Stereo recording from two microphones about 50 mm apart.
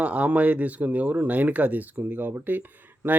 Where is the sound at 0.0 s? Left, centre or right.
Right.